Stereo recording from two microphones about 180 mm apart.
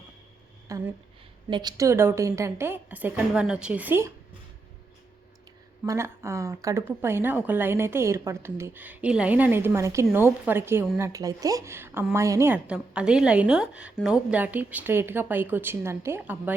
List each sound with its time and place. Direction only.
0.7 s speech: 20° right (ahead or behind)
5.8 s speech: 15° right (ahead or behind)